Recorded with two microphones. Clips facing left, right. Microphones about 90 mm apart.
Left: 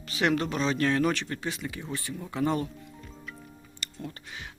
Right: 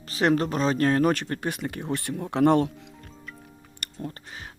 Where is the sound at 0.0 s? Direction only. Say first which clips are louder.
Right 4 dB; 40° right (ahead or behind); by 2.9 s 85° right.